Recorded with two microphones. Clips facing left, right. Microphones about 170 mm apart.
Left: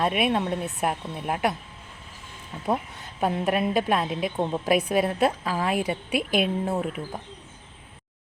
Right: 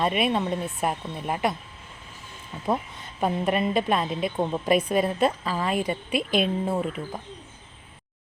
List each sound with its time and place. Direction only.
0.0 s a woman's voice: centre (ahead or behind)
3.2 s a woman's voice: centre (ahead or behind)